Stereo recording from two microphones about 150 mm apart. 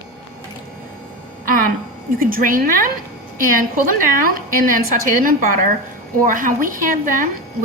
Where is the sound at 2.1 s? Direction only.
70° right (ahead or behind).